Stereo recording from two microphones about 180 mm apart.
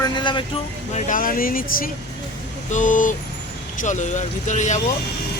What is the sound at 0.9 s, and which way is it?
Speech, 50° left (ahead or behind).